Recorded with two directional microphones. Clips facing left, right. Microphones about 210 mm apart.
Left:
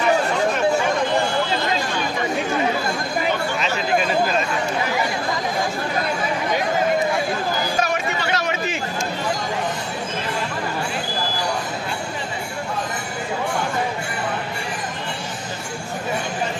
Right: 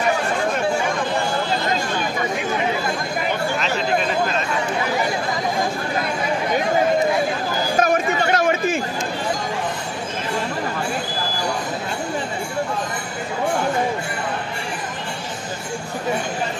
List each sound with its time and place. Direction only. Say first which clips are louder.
7.8 s chatter: right 5 dB; 50° right (ahead or behind)